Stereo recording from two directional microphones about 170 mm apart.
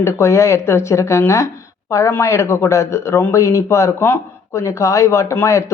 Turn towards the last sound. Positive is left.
turn(degrees=15)  # may be behind; listen again after turning